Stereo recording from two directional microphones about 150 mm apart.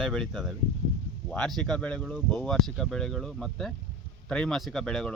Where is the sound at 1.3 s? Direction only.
5° left (ahead or behind).